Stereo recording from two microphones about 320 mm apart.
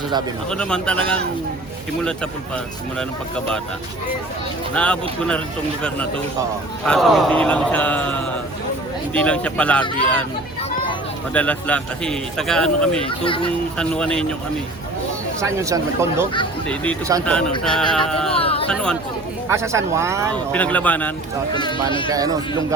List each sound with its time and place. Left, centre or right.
0.5 s speech: centre
4.7 s speech: centre
6.8 s speech: centre
11.3 s speech: centre
13.1 s speech: centre
13.7 s speech: centre
15.4 s speech: centre
16.6 s speech: centre
18.3 s speech: centre
18.7 s speech: centre
19.5 s speech: centre
20.3 s speech: centre
22.1 s speech: centre